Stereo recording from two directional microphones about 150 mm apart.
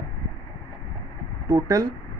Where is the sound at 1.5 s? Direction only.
20° right (ahead or behind).